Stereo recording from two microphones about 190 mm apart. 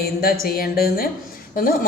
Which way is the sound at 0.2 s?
50° left (ahead or behind).